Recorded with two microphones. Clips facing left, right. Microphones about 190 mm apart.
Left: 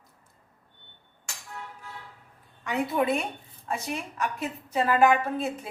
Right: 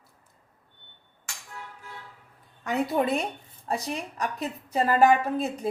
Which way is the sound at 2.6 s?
40° right (ahead or behind).